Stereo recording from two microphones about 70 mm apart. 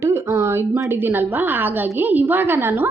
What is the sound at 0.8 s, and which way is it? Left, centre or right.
A woman's voice, right.